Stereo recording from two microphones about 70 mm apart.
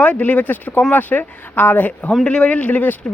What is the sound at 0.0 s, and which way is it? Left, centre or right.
Speech, left.